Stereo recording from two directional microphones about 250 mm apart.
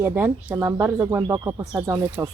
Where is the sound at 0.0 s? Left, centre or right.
Centre.